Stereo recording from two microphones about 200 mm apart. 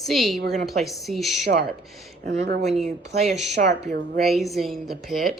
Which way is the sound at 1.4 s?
55° right (ahead or behind).